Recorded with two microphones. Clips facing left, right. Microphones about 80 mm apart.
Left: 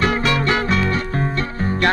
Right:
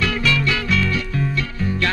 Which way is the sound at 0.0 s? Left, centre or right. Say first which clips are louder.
Left 2 dB; left.